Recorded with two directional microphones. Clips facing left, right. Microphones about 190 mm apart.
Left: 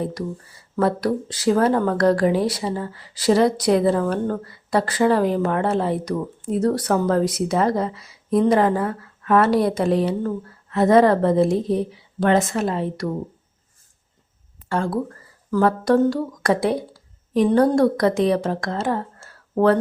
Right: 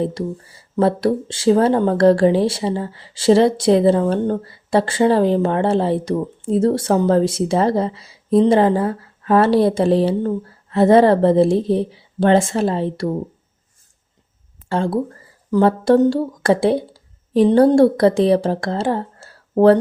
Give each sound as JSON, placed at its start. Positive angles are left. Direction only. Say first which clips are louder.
{"t": 0.0, "sound": "speech", "louder": "right 4 dB", "side_deg": -25}
{"t": 14.7, "sound": "speech", "louder": "right 3 dB", "side_deg": -30}